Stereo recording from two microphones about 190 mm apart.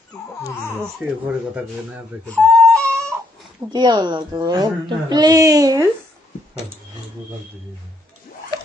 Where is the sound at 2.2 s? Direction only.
5° left (ahead or behind).